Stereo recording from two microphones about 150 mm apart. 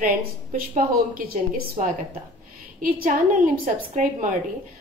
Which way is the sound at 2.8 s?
65° right (ahead or behind).